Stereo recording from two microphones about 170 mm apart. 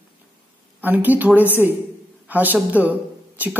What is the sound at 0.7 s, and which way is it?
A woman's voice, 10° right (ahead or behind).